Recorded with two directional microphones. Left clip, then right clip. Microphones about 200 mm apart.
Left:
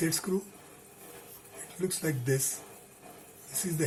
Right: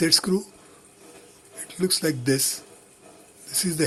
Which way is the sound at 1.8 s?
45° right (ahead or behind).